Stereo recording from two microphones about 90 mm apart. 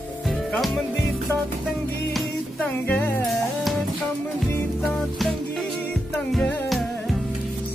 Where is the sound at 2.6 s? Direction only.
25° left (ahead or behind).